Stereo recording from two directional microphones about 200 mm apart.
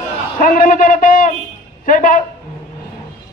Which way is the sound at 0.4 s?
45° left (ahead or behind).